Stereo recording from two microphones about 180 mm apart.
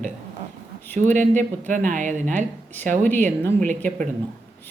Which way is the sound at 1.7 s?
45° right (ahead or behind).